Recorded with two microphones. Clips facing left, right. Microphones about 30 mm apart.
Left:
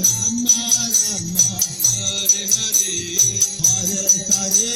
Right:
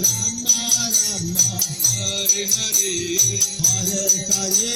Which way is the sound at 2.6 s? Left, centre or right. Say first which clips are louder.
Even; centre.